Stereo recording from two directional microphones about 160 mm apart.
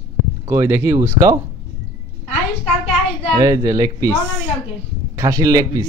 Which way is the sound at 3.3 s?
20° right (ahead or behind).